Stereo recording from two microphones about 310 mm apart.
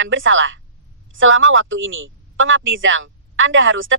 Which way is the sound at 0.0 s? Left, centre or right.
Right.